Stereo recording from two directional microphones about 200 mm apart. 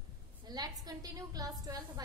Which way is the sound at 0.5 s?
20° right (ahead or behind).